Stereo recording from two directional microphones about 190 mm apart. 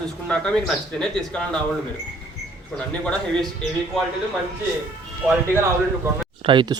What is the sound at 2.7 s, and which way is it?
Speech, 5° left (ahead or behind).